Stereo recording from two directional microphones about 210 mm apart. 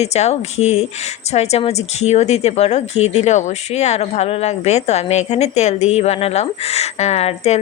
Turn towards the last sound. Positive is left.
turn(degrees=30)  # may be behind; listen again after turning